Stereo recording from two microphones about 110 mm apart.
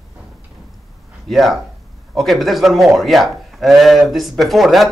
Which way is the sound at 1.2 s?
Centre (ahead or behind).